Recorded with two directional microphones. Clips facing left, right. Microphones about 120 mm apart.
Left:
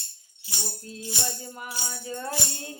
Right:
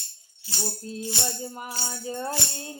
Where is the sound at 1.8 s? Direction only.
30° right (ahead or behind).